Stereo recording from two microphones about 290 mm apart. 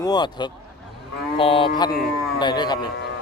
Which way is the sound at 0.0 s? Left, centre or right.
Centre.